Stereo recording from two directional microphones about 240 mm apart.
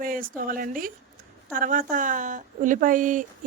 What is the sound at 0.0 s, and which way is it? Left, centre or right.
Speech, right.